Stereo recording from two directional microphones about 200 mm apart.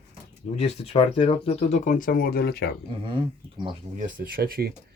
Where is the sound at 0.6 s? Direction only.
30° left (ahead or behind); by 2.6 s 50° left (ahead or behind).